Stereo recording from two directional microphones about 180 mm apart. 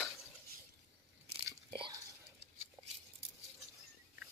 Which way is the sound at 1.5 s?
25° right (ahead or behind).